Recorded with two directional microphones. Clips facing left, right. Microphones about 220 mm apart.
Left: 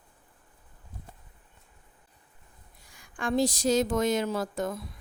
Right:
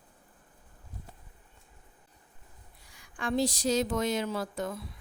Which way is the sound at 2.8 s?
45° left (ahead or behind).